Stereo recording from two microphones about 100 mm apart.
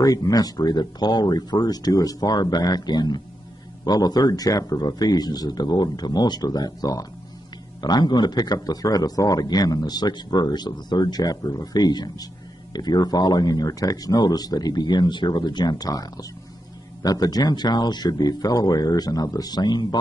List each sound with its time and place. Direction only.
0.0 s a man's voice: 40° left (ahead or behind)